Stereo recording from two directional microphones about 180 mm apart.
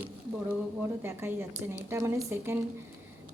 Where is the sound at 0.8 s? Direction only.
15° right (ahead or behind).